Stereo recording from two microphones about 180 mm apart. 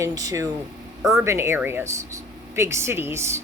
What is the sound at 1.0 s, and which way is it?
Speech, 5° right (ahead or behind).